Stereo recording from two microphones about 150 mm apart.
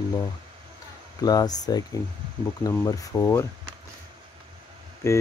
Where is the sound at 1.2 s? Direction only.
25° left (ahead or behind).